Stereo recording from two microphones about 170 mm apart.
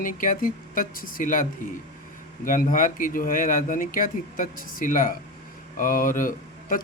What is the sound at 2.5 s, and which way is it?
Speech, 50° left (ahead or behind).